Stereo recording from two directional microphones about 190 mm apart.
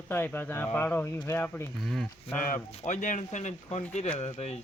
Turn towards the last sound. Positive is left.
turn(degrees=35)  # may be behind; listen again after turning